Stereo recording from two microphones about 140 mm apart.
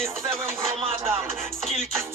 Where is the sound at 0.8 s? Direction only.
40° right (ahead or behind).